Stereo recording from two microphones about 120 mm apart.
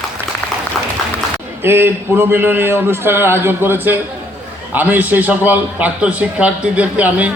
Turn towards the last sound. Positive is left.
turn(degrees=-10)  # may be behind; listen again after turning